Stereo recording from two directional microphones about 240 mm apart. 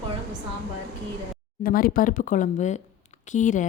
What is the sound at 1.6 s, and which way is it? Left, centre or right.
Speech, left.